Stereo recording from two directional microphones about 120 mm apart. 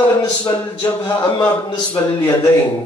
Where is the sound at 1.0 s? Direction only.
35° left (ahead or behind).